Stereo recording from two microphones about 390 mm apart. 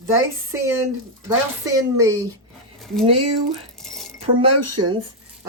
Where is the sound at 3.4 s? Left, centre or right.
Centre.